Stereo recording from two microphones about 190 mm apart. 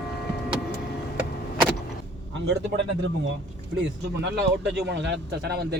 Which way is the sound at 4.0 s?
65° right (ahead or behind).